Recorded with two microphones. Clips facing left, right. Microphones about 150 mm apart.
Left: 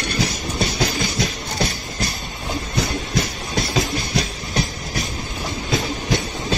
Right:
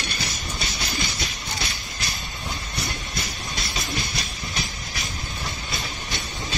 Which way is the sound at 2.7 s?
80° left.